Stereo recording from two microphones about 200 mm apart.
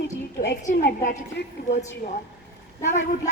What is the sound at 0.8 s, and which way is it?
Speech, 50° left (ahead or behind).